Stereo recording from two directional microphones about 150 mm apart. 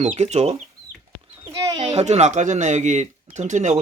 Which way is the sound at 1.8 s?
45° right (ahead or behind).